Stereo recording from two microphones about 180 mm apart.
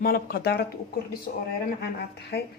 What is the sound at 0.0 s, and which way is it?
Speech, 55° left (ahead or behind).